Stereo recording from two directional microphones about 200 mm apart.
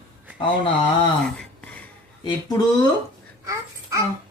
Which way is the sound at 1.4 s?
5° left (ahead or behind).